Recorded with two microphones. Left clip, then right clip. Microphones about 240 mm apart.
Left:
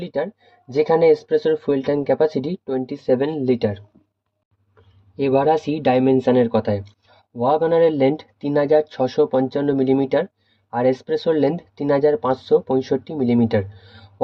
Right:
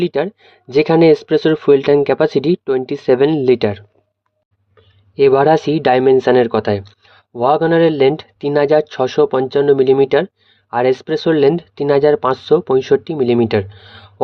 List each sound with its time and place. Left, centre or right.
0.0 s speech: right
5.3 s speech: right